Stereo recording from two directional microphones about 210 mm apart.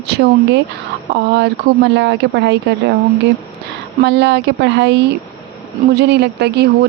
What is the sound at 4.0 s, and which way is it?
Speech, 55° right (ahead or behind).